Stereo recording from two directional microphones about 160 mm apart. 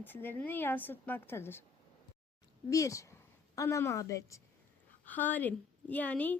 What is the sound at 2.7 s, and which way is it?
A woman's voice, 20° left (ahead or behind).